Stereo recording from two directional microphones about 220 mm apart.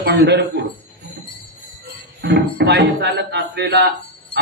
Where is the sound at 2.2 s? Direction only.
50° right (ahead or behind).